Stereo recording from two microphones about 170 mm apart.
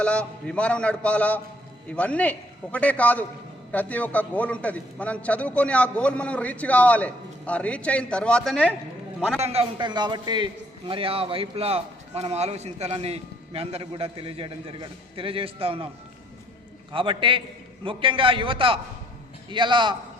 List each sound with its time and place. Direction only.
0.0 s a man's voice: 5° left (ahead or behind)
9.4 s a man's voice: 35° right (ahead or behind)
16.9 s a man's voice: 30° right (ahead or behind)